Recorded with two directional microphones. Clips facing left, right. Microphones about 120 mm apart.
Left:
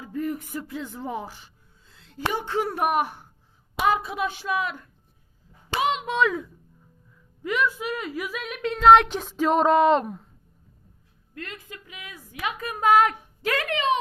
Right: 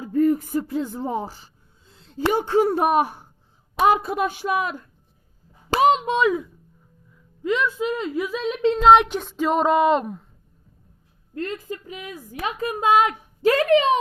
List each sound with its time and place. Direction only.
0.0 s speech: 40° right (ahead or behind)
1.9 s a sound: 30° right (ahead or behind)
2.3 s a woman's voice: 35° right (ahead or behind)
5.7 s a sound: 40° right (ahead or behind)
6.1 s a woman's voice: 15° right (ahead or behind)
9.0 s speech: centre (ahead or behind)
11.3 s a woman's voice: 35° right (ahead or behind)
13.4 s a woman's voice: 35° right (ahead or behind)